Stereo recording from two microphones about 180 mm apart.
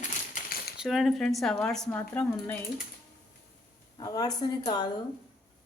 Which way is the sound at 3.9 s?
20° left (ahead or behind).